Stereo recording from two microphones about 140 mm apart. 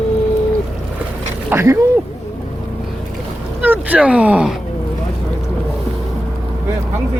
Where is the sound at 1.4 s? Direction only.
20° right (ahead or behind).